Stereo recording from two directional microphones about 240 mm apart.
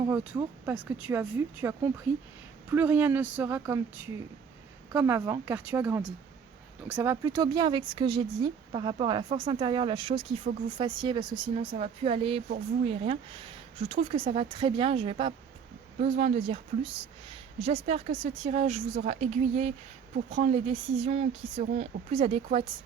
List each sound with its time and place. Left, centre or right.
0.1 s speech: centre; by 22.6 s right